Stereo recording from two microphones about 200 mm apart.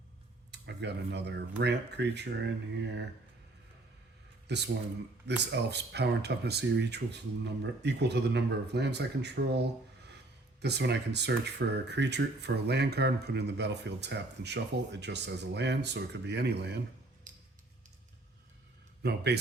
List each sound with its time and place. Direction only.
0.5 s speech: 60° right (ahead or behind)
4.4 s speech: 60° right (ahead or behind)
17.3 s a sound: 40° right (ahead or behind)
19.0 s speech: 55° right (ahead or behind)